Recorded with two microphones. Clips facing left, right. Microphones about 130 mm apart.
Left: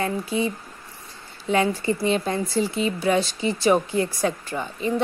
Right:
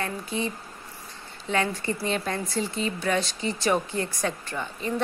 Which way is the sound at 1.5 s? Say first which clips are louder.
Left 5 dB; 25° left (ahead or behind).